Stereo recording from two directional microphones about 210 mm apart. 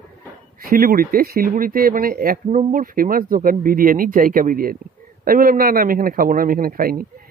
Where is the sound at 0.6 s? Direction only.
45° right (ahead or behind).